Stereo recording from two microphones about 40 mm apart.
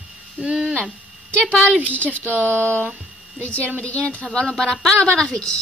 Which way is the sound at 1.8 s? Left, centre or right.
Right.